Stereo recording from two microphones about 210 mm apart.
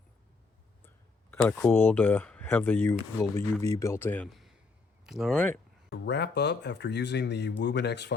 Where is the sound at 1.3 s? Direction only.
5° left (ahead or behind).